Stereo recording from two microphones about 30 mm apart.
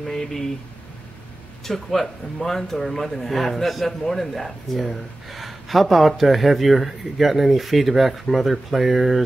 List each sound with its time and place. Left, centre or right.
0.1 s speech: centre
1.6 s speech: centre